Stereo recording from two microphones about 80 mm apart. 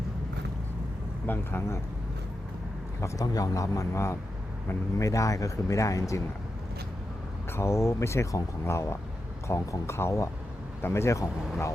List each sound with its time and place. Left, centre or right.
1.3 s speech: left
3.0 s speech: left
7.5 s speech: left